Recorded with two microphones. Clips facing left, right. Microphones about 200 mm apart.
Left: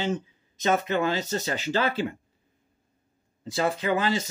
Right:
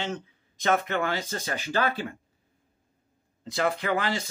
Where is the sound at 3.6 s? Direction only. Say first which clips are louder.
Left 2 dB; 15° left (ahead or behind).